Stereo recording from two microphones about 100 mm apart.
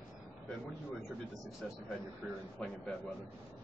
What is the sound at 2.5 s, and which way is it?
Speech, 10° left (ahead or behind).